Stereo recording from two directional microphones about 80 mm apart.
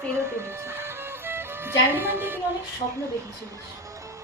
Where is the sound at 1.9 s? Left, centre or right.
Right.